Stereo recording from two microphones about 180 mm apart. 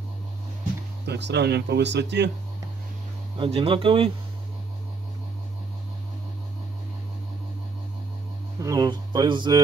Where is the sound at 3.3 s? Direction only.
30° right (ahead or behind).